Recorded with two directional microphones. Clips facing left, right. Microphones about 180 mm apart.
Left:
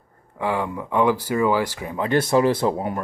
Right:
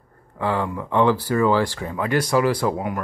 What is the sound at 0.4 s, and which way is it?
Speech, 15° left (ahead or behind).